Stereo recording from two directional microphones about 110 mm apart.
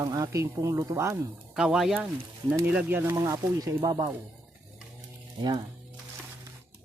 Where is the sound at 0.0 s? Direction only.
35° right (ahead or behind).